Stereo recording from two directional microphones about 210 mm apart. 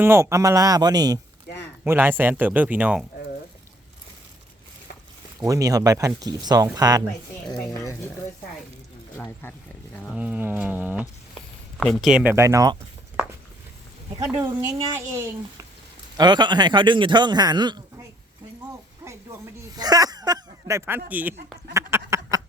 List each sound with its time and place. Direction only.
0.0 s speech: 15° right (ahead or behind)
5.4 s speech: 15° right (ahead or behind)
9.1 s speech: 10° left (ahead or behind)
10.1 s speech: 5° right (ahead or behind)
14.3 s a man's voice: 10° right (ahead or behind)
19.0 s a sound: 15° right (ahead or behind)
21.1 s speech: 10° right (ahead or behind)
21.7 s a sound: 15° right (ahead or behind)